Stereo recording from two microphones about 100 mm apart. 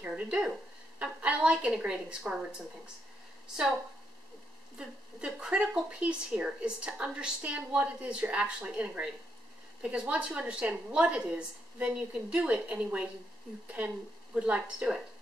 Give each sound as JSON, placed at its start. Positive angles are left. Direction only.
{"t": 0.0, "sound": "a woman's voice", "side_deg": -10}
{"t": 4.7, "sound": "speech", "side_deg": -10}